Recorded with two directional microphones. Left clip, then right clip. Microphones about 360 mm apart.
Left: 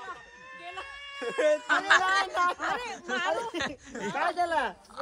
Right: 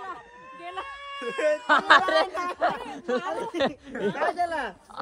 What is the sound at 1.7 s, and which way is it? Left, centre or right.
A man's voice, centre.